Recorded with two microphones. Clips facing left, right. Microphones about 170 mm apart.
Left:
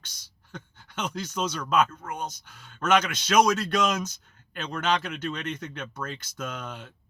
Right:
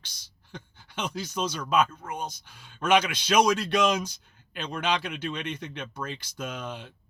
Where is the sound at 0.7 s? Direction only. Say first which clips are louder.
Left 1 dB; 55° left (ahead or behind).